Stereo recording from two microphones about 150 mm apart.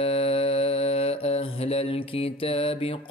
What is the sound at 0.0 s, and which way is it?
Mantra, 40° left (ahead or behind).